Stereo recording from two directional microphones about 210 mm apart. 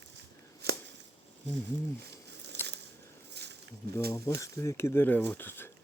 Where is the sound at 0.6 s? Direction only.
50° right (ahead or behind).